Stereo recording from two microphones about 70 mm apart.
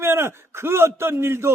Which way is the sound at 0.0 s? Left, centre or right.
Right.